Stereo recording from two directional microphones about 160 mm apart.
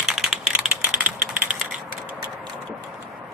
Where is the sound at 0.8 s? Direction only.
10° right (ahead or behind).